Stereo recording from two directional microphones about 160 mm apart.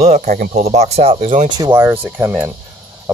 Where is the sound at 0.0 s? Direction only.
45° right (ahead or behind).